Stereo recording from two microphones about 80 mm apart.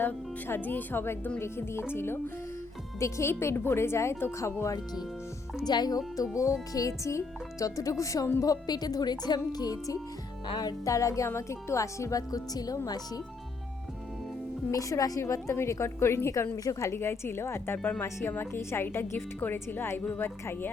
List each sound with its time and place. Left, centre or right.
0.0 s a woman's voice: left
5.6 s speech: left
6.2 s speech: left
8.4 s speech: left
14.7 s a woman's voice: left